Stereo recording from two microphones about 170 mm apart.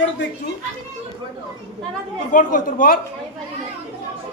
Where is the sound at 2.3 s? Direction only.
50° left (ahead or behind).